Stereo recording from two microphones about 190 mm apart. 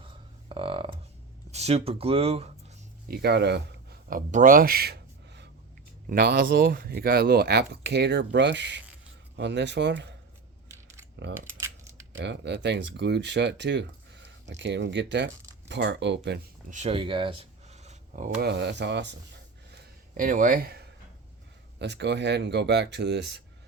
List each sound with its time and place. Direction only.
0.0 s a sound: 30° right (ahead or behind)
1.5 s speech: 35° right (ahead or behind)
3.1 s speech: 60° right (ahead or behind)
4.3 s speech: 40° right (ahead or behind); by 10.2 s 65° right (ahead or behind)
11.6 s typing: 15° right (ahead or behind)
12.1 s speech: 65° right (ahead or behind)
16.6 s a sound: 35° right (ahead or behind)
18.3 s speech: 60° right (ahead or behind)
20.1 s speech: 45° right (ahead or behind)
21.8 s speech: 65° right (ahead or behind)